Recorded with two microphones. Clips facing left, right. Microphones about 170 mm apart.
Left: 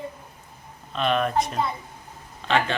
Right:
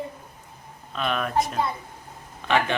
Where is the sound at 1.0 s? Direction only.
5° right (ahead or behind).